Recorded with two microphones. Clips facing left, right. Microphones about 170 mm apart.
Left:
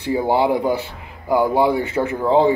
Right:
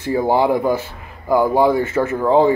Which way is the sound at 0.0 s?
15° left (ahead or behind).